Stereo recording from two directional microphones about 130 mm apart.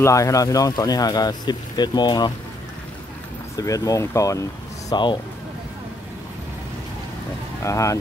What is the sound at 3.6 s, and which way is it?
Speech, 25° left (ahead or behind).